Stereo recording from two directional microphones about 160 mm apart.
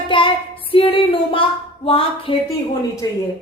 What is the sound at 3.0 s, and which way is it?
Speech, 20° left (ahead or behind).